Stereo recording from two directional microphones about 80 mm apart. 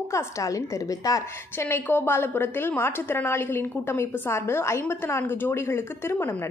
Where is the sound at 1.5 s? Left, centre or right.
Left.